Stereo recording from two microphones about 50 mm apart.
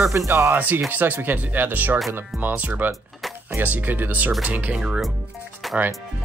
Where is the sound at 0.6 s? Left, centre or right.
Right.